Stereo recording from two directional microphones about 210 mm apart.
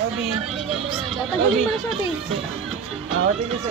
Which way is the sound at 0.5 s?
Centre (ahead or behind).